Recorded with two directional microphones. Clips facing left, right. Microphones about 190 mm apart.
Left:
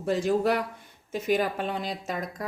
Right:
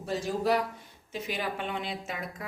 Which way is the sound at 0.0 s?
60° left (ahead or behind).